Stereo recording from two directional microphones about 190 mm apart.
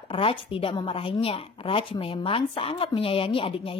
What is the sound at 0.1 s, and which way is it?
A woman's voice, 30° left (ahead or behind).